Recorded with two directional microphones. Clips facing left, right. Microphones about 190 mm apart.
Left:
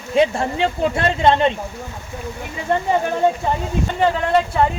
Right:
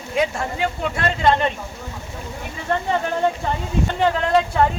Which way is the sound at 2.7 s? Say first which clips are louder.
Left 3 dB; 15° left (ahead or behind).